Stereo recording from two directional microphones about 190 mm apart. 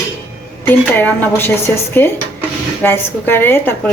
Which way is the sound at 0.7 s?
10° left (ahead or behind).